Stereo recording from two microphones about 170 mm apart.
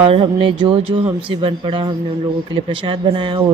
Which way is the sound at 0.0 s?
30° right (ahead or behind).